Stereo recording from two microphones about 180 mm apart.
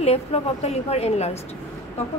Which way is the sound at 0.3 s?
35° left (ahead or behind).